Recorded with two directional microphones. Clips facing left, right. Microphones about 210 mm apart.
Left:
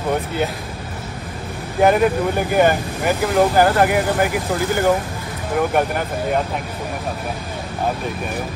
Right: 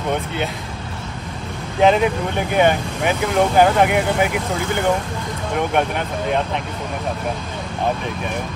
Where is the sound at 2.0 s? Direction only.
Centre (ahead or behind).